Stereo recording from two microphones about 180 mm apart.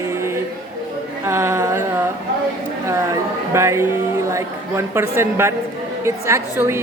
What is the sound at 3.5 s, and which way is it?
A woman's voice, 15° right (ahead or behind).